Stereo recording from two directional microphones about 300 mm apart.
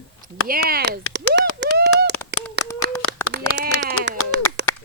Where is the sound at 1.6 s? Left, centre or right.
Right.